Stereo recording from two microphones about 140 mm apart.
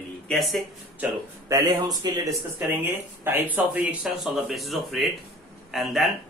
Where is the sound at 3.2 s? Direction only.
15° right (ahead or behind).